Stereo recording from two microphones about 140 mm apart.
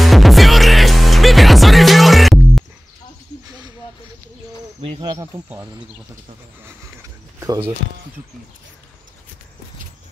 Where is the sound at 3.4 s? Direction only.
30° right (ahead or behind).